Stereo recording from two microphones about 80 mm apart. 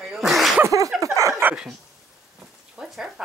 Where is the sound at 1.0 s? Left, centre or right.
Right.